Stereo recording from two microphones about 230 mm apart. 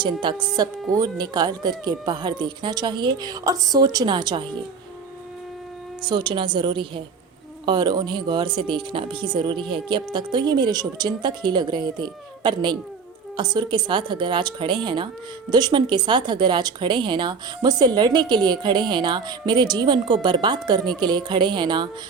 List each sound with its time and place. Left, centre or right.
0.0 s speech: centre
6.0 s a woman's voice: centre